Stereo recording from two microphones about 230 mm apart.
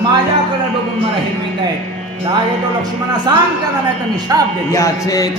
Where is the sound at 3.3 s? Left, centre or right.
Centre.